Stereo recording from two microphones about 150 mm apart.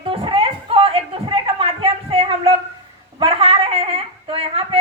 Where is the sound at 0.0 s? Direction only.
35° right (ahead or behind).